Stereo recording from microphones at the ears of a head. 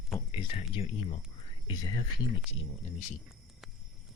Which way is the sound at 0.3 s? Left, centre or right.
Left.